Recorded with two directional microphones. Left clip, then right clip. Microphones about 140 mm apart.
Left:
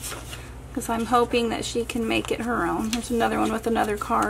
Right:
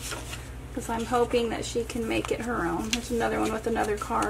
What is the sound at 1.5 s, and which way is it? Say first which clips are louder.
Speech: left 3 dB; 35° left (ahead or behind).